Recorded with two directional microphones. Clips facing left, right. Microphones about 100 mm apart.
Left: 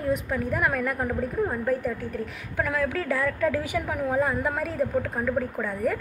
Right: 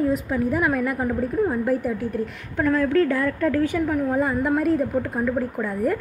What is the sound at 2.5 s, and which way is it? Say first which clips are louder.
A woman's voice: right 7 dB; 5° left (ahead or behind).